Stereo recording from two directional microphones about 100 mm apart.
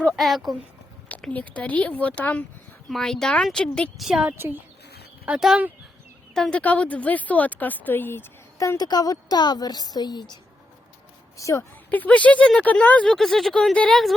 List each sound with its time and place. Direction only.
0.2 s speech: centre (ahead or behind)
1.0 s a woman's voice: 15° left (ahead or behind)
4.0 s a woman's voice: 5° right (ahead or behind)
4.4 s speech: 20° right (ahead or behind)
5.2 s speech: 10° right (ahead or behind)
6.3 s a woman's voice: 10° left (ahead or behind)
8.5 s a woman's voice: 35° left (ahead or behind)
11.3 s a woman's voice: 30° left (ahead or behind)
11.9 s a woman's voice: 15° left (ahead or behind)
13.1 s speech: centre (ahead or behind)